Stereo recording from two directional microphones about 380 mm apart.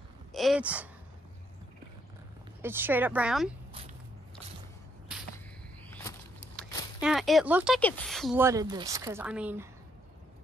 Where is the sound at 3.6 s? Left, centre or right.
Centre.